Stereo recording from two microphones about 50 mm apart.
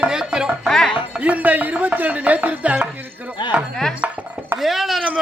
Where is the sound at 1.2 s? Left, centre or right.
Right.